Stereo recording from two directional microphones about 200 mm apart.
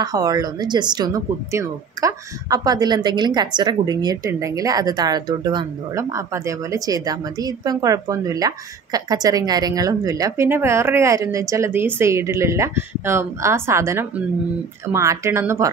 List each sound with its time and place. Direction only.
0.0 s speech: 20° right (ahead or behind)